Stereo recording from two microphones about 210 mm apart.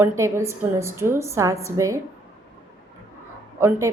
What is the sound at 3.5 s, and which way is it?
Speech, 15° right (ahead or behind).